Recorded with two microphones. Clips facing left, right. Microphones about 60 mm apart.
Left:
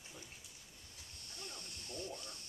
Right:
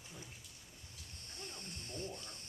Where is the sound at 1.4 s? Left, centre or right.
Right.